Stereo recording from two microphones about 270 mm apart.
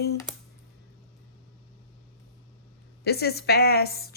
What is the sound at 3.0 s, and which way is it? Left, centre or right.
A woman's voice, left.